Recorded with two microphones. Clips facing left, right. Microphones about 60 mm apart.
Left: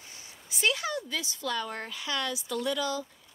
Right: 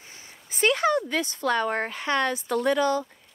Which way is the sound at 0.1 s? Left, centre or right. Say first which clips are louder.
Right 1 dB; right.